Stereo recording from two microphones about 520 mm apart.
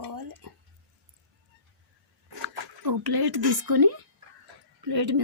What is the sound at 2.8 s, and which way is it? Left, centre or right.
Speech, right.